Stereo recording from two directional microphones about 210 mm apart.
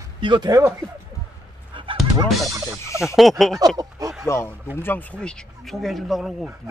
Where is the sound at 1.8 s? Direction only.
25° right (ahead or behind).